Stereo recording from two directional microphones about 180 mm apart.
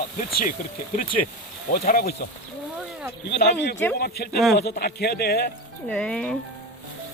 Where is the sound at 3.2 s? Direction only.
65° left (ahead or behind).